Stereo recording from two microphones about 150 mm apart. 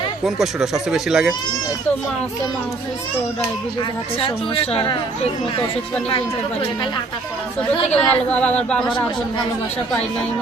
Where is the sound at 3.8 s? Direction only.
35° left (ahead or behind).